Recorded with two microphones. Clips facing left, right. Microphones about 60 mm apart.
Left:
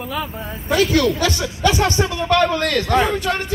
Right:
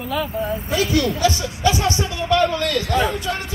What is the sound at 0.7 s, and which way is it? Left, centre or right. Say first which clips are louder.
Speech: left 5 dB; left.